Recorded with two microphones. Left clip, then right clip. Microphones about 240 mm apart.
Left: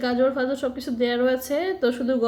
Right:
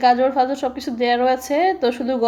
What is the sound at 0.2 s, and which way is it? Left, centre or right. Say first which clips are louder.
A woman's voice: right 4 dB; right.